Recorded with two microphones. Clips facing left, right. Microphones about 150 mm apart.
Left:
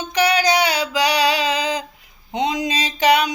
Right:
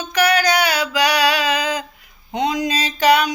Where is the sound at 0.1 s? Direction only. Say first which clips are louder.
Even; 20° left (ahead or behind).